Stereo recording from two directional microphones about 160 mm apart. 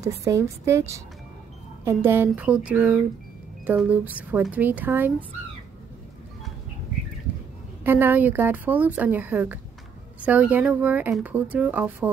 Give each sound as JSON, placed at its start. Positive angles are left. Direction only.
{"t": 0.0, "sound": "speech", "side_deg": -20}
{"t": 7.8, "sound": "speech", "side_deg": -15}